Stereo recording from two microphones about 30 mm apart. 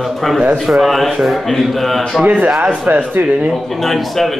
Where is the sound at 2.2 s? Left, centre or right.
Right.